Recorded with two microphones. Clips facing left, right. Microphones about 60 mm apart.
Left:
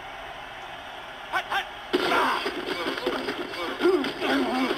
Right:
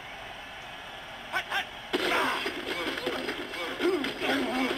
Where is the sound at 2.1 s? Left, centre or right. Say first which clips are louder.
Left 5 dB; centre.